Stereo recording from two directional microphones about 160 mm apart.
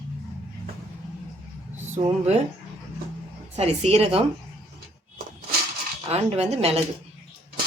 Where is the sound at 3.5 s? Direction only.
40° right (ahead or behind).